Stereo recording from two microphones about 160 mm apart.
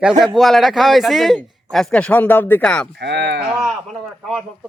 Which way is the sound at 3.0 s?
90° right.